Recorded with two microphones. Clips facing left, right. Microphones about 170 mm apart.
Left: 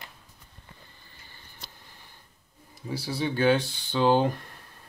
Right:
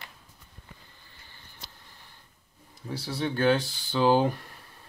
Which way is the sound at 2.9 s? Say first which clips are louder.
Left 1 dB; 5° left (ahead or behind).